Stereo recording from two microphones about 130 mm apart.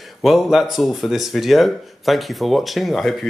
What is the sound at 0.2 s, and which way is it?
Speech, centre (ahead or behind).